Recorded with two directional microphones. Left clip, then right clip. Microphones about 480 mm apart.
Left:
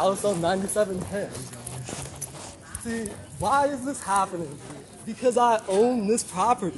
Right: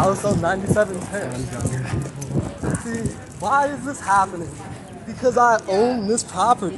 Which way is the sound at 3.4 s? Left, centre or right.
Centre.